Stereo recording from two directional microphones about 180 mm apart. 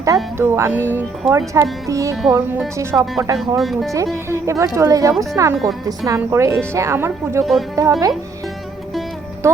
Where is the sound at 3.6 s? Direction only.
Centre (ahead or behind).